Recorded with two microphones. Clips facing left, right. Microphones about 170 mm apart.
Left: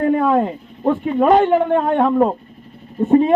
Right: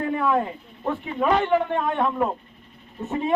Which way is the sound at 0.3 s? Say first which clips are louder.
Left 7 dB; 50° left (ahead or behind).